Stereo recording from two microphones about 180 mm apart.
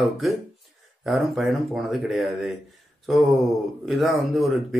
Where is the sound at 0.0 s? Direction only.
Centre (ahead or behind).